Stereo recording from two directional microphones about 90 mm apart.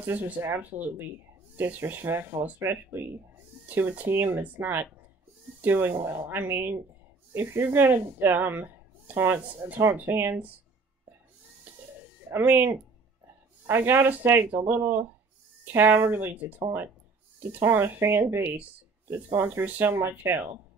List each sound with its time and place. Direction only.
0.0 s speech: 25° right (ahead or behind)
11.7 s a sound: 20° right (ahead or behind)
12.3 s speech: 20° right (ahead or behind)
17.6 s speech: 25° right (ahead or behind)